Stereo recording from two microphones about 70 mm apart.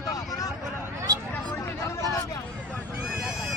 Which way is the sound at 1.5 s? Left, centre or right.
Left.